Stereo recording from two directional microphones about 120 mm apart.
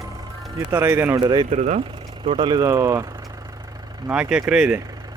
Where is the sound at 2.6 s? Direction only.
25° right (ahead or behind).